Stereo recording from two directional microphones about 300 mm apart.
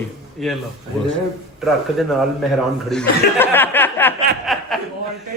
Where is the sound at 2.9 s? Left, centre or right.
Centre.